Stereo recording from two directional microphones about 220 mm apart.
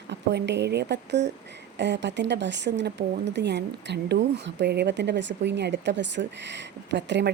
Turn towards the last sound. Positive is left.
turn(degrees=-55)  # may be behind; listen again after turning